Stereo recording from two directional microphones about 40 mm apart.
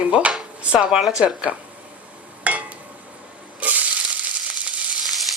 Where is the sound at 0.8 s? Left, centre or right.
Centre.